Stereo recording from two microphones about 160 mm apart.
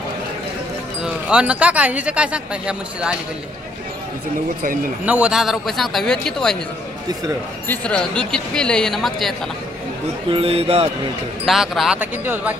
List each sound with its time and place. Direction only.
1.0 s speech: 5° right (ahead or behind)
5.0 s speech: 10° right (ahead or behind)
7.6 s speech: 10° left (ahead or behind)
10.3 s speech: 40° right (ahead or behind)
11.4 s speech: centre (ahead or behind)